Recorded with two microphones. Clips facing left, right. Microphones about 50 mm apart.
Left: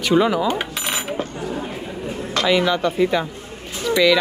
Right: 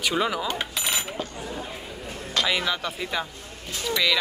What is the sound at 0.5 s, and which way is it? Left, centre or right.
Cutlery, centre.